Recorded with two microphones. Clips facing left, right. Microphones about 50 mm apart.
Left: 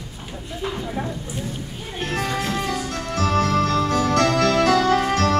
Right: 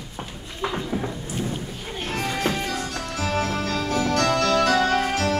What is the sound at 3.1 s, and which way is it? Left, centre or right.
Music, left.